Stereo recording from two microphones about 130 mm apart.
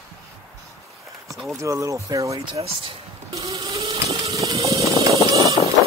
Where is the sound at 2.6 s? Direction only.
50° right (ahead or behind).